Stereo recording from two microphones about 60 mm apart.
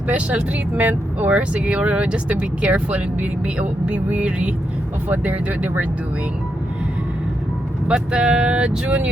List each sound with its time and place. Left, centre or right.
0.8 s speech: right
7.9 s speech: centre